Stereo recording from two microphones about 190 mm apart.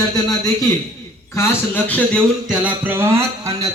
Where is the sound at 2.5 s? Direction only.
5° right (ahead or behind).